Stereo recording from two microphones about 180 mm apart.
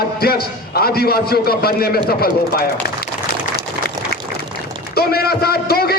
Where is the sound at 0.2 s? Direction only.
60° left (ahead or behind).